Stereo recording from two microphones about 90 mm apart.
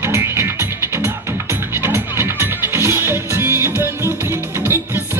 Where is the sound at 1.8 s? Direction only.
25° right (ahead or behind).